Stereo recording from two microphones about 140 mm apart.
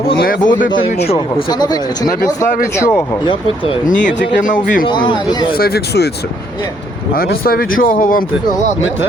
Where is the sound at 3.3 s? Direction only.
40° left (ahead or behind).